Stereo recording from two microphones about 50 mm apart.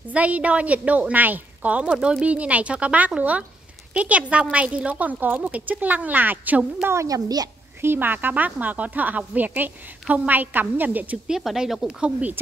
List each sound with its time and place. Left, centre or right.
0.1 s a woman's voice: right
1.9 s speech: centre
2.2 s a woman's voice: right
6.8 s a woman's voice: right
11.2 s speech: centre
12.0 s a woman's voice: right